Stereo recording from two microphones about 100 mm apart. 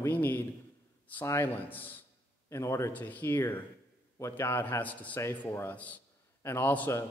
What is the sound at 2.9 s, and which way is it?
A man's voice, 15° left (ahead or behind).